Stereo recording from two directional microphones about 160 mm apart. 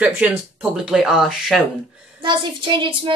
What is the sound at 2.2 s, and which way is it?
Speech, 30° right (ahead or behind).